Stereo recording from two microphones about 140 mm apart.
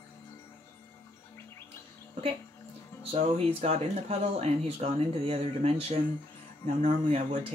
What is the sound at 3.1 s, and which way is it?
Speech, 50° right (ahead or behind).